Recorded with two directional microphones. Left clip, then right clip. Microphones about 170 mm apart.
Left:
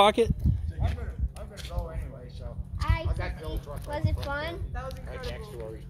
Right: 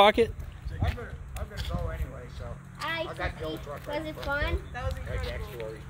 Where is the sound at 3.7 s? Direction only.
55° left (ahead or behind).